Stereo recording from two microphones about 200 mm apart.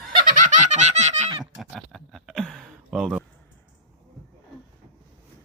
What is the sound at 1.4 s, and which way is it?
Speech, centre (ahead or behind).